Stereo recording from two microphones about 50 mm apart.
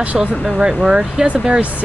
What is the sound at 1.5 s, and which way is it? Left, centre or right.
Speech, right.